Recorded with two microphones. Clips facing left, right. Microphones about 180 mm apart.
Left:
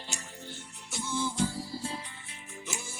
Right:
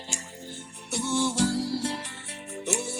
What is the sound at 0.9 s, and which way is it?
Music, 70° right (ahead or behind).